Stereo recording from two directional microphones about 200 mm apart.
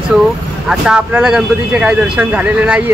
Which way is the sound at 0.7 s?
5° right (ahead or behind).